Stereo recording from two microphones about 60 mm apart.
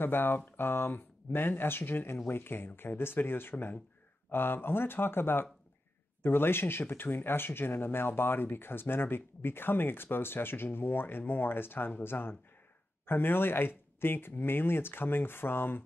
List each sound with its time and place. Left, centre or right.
0.0 s speech: left